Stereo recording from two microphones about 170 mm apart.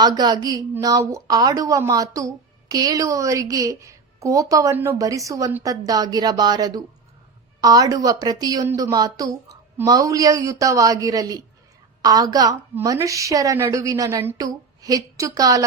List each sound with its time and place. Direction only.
0.0 s a woman's voice: 25° right (ahead or behind)